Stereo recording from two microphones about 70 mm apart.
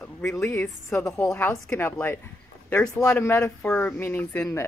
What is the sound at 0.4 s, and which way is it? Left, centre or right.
Speech, left.